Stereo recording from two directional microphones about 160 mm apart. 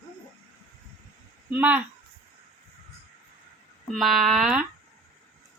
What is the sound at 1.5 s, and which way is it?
Female singing, 10° right (ahead or behind).